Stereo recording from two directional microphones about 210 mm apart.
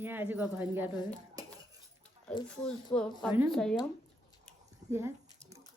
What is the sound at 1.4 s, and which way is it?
Cutlery, 15° right (ahead or behind).